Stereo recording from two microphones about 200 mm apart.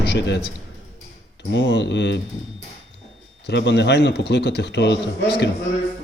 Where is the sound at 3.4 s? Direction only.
60° left (ahead or behind).